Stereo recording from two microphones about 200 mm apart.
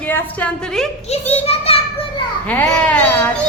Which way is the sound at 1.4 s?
30° left (ahead or behind).